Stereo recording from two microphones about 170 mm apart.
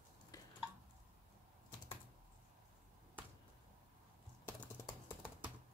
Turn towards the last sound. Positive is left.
turn(degrees=10)  # may be behind; listen again after turning